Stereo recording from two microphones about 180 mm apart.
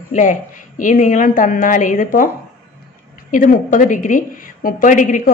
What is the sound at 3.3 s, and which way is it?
A woman's voice, 45° left (ahead or behind).